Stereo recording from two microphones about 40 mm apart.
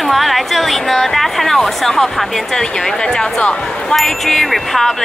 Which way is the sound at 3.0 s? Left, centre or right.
Centre.